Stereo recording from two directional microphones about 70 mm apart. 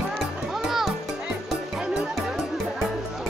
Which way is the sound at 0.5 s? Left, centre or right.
Centre.